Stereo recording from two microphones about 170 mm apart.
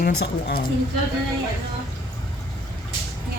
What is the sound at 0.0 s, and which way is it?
Speech, 65° left (ahead or behind).